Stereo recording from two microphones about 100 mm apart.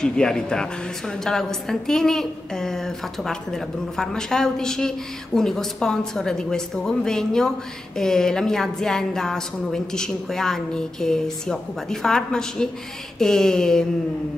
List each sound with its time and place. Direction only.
0.0 s a woman's voice: 5° left (ahead or behind)